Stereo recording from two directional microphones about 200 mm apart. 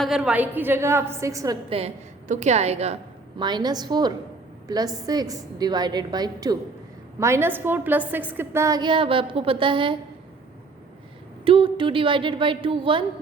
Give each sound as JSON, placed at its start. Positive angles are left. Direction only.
{"t": 0.0, "sound": "a woman's voice", "side_deg": 0}
{"t": 1.7, "sound": "a woman's voice", "side_deg": -35}
{"t": 11.4, "sound": "a woman's voice", "side_deg": -25}